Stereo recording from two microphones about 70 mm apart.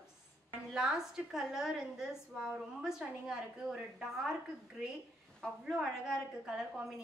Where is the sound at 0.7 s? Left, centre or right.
Centre.